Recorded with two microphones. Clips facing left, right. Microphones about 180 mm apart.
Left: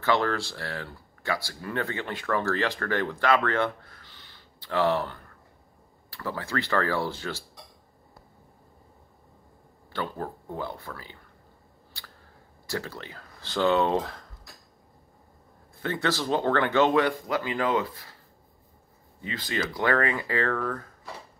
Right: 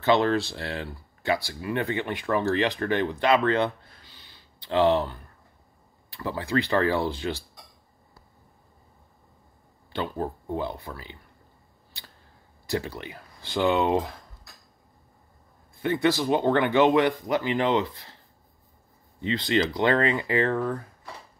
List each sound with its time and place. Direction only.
0.0 s speech: 20° right (ahead or behind)
9.9 s speech: 20° right (ahead or behind)
12.6 s speech: 20° right (ahead or behind)
15.8 s speech: 15° right (ahead or behind)
19.2 s speech: 25° right (ahead or behind)